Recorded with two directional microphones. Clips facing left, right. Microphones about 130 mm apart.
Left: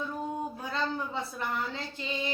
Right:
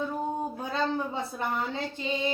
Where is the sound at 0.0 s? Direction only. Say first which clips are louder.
Right 3 dB; 30° right (ahead or behind).